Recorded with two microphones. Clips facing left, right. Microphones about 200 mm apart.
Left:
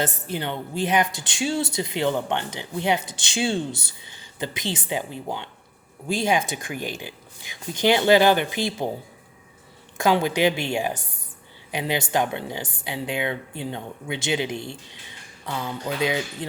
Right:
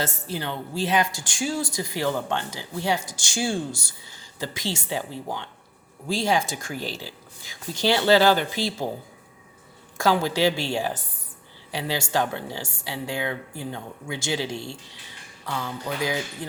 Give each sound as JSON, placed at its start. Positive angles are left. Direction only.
{"t": 0.0, "sound": "speech", "side_deg": 20}
{"t": 3.7, "sound": "speech", "side_deg": 60}
{"t": 4.0, "sound": "speech", "side_deg": 20}
{"t": 10.0, "sound": "speech", "side_deg": 15}